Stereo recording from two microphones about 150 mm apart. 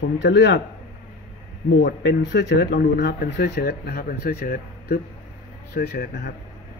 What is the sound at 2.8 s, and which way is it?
Speech, 90° left.